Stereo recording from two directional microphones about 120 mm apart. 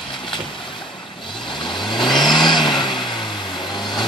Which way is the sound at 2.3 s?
40° left (ahead or behind).